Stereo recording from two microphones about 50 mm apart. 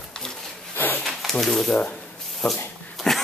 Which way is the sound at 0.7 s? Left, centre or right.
Left.